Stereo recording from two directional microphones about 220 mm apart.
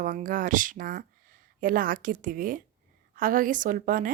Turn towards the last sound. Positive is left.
turn(degrees=-40)  # may be behind; listen again after turning